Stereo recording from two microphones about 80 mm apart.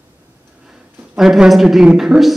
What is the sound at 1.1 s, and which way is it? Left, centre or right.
A woman's voice, centre.